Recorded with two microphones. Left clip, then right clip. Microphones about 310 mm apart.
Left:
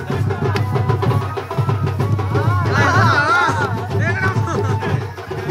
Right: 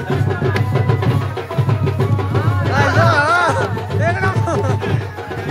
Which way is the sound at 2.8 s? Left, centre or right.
Left.